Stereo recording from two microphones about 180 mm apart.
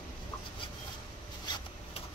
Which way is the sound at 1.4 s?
25° left (ahead or behind).